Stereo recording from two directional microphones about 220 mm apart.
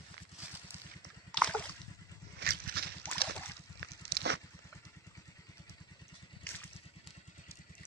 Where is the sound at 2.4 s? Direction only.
45° right (ahead or behind).